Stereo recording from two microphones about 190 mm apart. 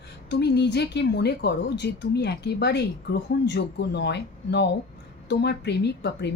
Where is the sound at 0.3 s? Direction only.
60° left (ahead or behind).